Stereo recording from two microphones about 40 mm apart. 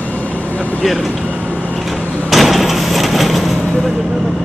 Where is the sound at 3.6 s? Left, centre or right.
Centre.